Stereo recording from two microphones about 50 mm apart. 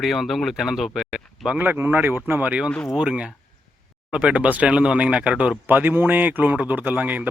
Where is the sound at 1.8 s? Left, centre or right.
Right.